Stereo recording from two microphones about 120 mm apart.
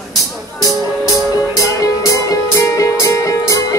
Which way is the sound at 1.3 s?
30° left (ahead or behind).